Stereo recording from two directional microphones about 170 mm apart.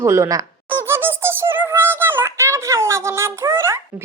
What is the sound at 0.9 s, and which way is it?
Synthetic singing, 15° right (ahead or behind).